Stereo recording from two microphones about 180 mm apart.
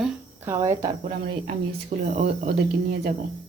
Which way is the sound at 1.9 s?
40° right (ahead or behind).